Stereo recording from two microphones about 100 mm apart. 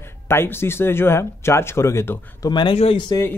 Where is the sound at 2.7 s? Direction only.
90° left.